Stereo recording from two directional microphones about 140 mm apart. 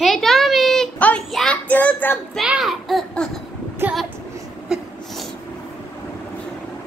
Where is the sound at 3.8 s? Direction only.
15° right (ahead or behind).